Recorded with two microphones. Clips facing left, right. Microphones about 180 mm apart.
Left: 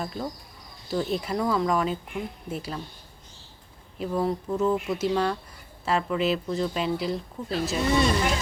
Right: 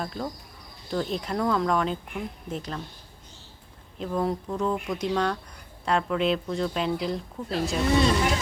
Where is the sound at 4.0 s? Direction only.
5° left (ahead or behind).